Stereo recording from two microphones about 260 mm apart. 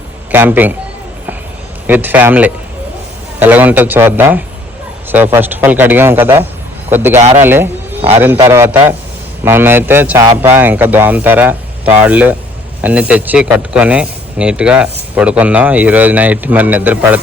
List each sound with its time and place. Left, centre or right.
0.3 s a man's voice: centre
1.9 s a man's voice: centre
7.2 s a man's voice: right
7.4 s a man's voice: centre